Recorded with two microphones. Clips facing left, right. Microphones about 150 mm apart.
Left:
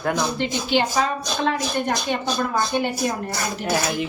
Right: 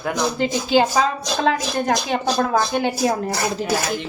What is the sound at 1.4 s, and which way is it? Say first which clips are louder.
Speech: right 3 dB; 90° right.